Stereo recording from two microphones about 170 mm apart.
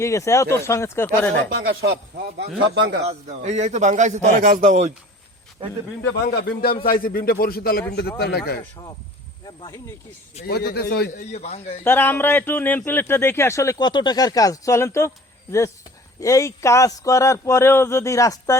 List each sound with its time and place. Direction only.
0.0 s a man's voice: 20° left (ahead or behind)
1.6 s speech: 65° right (ahead or behind)
2.7 s a man's voice: 80° right
3.1 s a man's voice: 40° right (ahead or behind)
6.2 s a man's voice: 65° left (ahead or behind)
10.4 s a man's voice: 65° left (ahead or behind)
11.2 s speech: 40° left (ahead or behind)
11.8 s speech: 10° left (ahead or behind)
16.2 s a man's voice: 20° left (ahead or behind)